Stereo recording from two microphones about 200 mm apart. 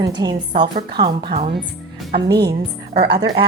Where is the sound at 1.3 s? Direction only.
35° right (ahead or behind).